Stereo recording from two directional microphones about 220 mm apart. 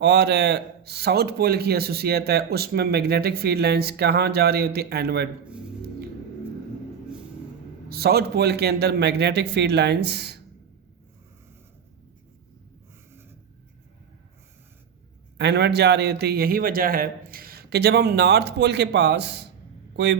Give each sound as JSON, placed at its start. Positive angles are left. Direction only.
{"t": 0.0, "sound": "a man's voice", "side_deg": -50}
{"t": 7.9, "sound": "a man's voice", "side_deg": -45}
{"t": 15.4, "sound": "a man's voice", "side_deg": -50}